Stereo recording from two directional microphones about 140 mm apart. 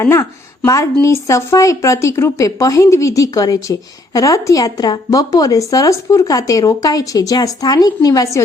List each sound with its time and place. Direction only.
0.0 s speech: 20° left (ahead or behind)